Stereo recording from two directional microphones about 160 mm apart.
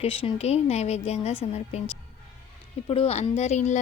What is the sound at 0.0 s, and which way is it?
Speech, 35° left (ahead or behind).